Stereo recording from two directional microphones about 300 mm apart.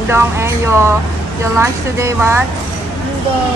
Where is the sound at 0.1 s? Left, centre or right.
Centre.